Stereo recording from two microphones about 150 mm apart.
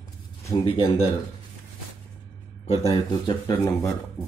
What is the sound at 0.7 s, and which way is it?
Speech, 40° left (ahead or behind).